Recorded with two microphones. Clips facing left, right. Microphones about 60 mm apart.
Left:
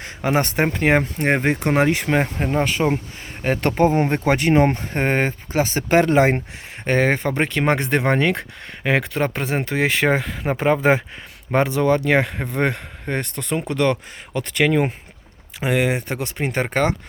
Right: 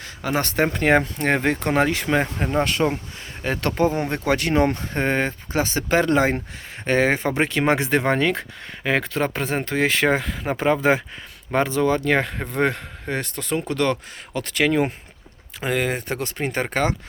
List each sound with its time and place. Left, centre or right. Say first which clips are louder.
0.0 s speech: left 4 dB; left
0.7 s speech: even; centre; by 6.1 s left
6.9 s speech: left 1 dB; centre